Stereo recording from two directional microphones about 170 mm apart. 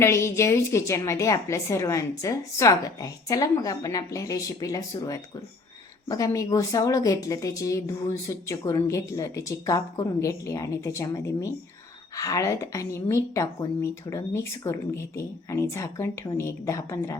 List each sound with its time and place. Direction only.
0.0 s a woman's voice: 15° left (ahead or behind)